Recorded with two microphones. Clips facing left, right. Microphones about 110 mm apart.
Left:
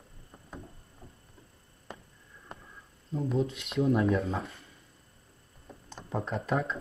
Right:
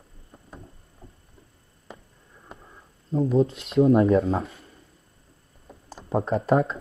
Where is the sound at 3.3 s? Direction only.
30° right (ahead or behind).